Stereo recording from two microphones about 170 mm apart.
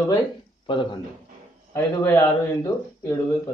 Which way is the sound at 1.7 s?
15° left (ahead or behind).